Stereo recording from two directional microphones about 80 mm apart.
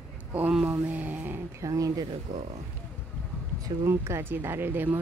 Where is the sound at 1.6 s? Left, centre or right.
Right.